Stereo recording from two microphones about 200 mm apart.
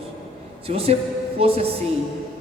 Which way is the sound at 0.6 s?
30° right (ahead or behind).